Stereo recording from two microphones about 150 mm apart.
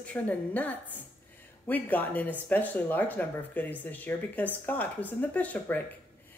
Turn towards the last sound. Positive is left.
turn(degrees=10)  # may be behind; listen again after turning